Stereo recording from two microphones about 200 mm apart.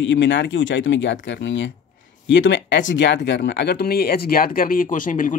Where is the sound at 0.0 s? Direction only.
65° left (ahead or behind).